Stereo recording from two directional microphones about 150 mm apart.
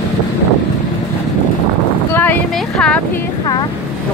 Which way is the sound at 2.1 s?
10° left (ahead or behind).